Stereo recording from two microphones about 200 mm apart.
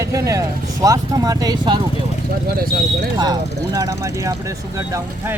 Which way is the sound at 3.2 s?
20° right (ahead or behind).